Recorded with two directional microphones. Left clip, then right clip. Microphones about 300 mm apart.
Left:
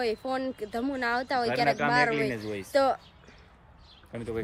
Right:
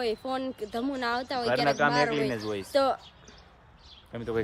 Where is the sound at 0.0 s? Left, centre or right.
Centre.